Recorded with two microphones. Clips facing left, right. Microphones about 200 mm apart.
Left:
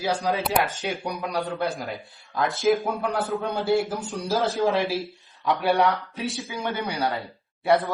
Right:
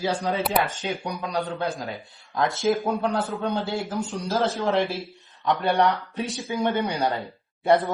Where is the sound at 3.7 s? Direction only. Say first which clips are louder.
Left 2 dB; 20° right (ahead or behind).